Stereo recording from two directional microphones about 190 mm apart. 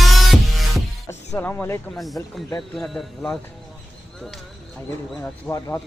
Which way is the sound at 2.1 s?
20° left (ahead or behind).